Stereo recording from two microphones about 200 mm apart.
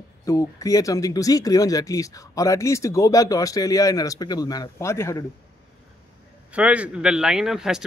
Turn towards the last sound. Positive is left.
turn(degrees=0)  # may be behind; listen again after turning